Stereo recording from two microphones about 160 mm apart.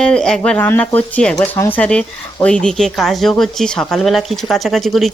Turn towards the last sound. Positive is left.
turn(degrees=0)  # may be behind; listen again after turning